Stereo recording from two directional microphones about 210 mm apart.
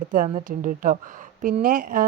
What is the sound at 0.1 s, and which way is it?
Speech, 40° right (ahead or behind).